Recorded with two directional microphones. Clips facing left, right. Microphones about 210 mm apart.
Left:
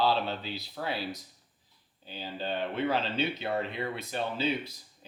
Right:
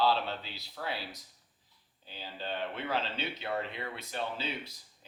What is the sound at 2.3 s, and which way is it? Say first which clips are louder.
Speech: left 5 dB; 15° left (ahead or behind).